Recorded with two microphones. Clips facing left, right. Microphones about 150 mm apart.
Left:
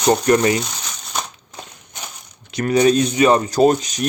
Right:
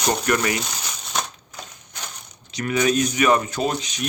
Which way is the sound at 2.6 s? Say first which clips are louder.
Left 6 dB; 35° left (ahead or behind).